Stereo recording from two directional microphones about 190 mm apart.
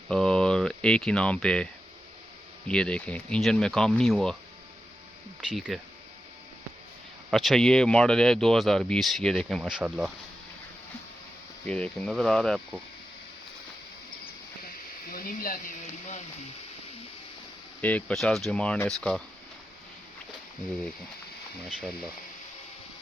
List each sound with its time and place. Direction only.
0.1 s speech: 5° left (ahead or behind)
2.6 s speech: 5° left (ahead or behind)
5.5 s speech: centre (ahead or behind)
7.3 s speech: centre (ahead or behind)
11.6 s speech: 5° left (ahead or behind)
15.1 s speech: 50° left (ahead or behind)
17.7 s speech: 10° left (ahead or behind)